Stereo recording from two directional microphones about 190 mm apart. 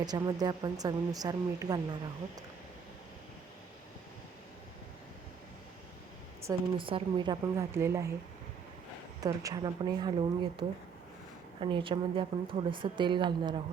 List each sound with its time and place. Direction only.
0.0 s speech: 20° right (ahead or behind)
6.4 s speech: 25° right (ahead or behind)
9.2 s speech: 20° right (ahead or behind)